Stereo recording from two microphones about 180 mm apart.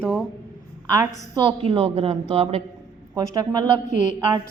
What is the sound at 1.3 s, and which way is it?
A woman's voice, 30° right (ahead or behind).